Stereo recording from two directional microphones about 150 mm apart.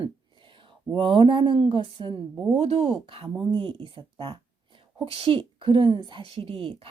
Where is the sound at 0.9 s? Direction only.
35° right (ahead or behind).